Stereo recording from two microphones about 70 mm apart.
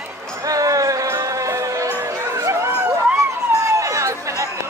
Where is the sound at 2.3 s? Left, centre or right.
Right.